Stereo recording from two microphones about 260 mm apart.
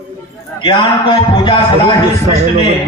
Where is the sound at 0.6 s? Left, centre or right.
Centre.